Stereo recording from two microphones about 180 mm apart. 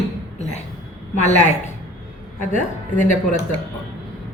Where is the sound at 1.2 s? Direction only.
40° left (ahead or behind).